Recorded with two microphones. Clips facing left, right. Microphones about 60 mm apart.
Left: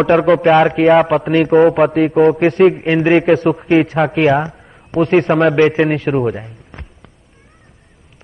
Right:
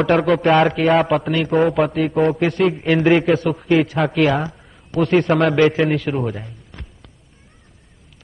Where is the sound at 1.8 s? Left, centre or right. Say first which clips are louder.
Left 6 dB; left.